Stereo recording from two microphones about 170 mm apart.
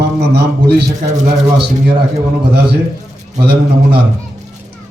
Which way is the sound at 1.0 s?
45° right (ahead or behind).